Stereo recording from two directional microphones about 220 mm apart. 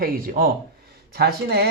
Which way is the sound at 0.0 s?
40° right (ahead or behind).